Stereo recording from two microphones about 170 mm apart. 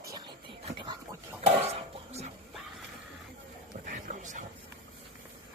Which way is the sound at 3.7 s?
50° right (ahead or behind).